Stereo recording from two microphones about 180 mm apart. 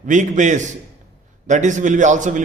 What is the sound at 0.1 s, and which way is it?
A man's voice, 45° right (ahead or behind).